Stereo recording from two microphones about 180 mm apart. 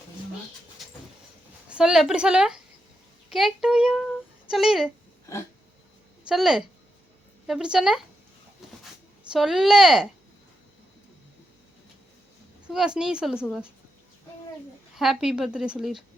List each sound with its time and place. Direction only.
0.8 s vehicle: centre (ahead or behind)
1.7 s a woman's voice: 5° right (ahead or behind)
5.3 s a sound: 15° left (ahead or behind)
6.2 s a woman's voice: centre (ahead or behind)
9.3 s a woman's voice: centre (ahead or behind)
12.6 s a woman's voice: 5° right (ahead or behind)
14.9 s a woman's voice: centre (ahead or behind)